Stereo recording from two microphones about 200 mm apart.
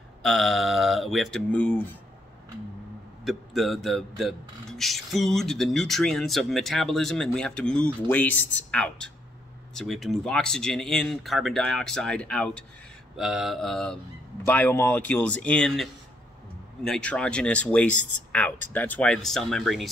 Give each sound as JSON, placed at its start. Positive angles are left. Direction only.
{"t": 0.2, "sound": "speech", "side_deg": 0}
{"t": 3.3, "sound": "a man's voice", "side_deg": 0}